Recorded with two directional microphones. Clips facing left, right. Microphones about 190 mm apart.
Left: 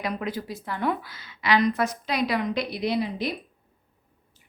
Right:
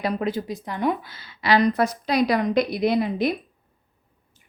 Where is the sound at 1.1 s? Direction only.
30° right (ahead or behind); by 3.3 s 50° right (ahead or behind).